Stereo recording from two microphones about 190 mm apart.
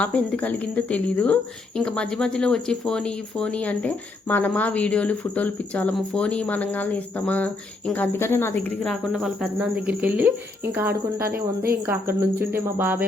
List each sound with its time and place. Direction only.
0.0 s speech: 5° left (ahead or behind); by 10.3 s 10° right (ahead or behind)
10.7 s cricket: 10° right (ahead or behind)
11.3 s speech: 55° right (ahead or behind)
12.4 s cricket: 10° right (ahead or behind)